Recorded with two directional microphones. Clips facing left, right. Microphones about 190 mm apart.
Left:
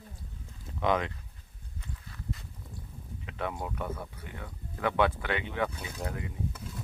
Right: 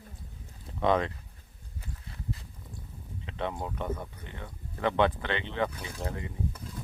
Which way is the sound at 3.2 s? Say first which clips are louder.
Right 1 dB; 25° right (ahead or behind).